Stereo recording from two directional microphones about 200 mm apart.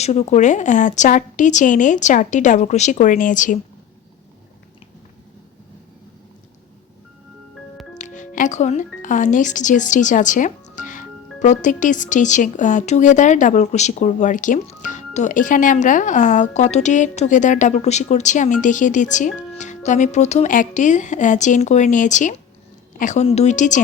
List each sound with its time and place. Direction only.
0.0 s speech: 35° left (ahead or behind)
7.9 s speech: 40° left (ahead or behind)